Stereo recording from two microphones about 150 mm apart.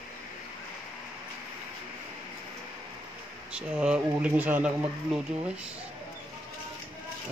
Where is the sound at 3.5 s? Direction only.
5° right (ahead or behind).